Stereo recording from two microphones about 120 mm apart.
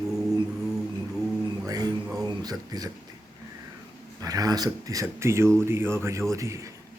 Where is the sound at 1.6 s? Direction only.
30° right (ahead or behind).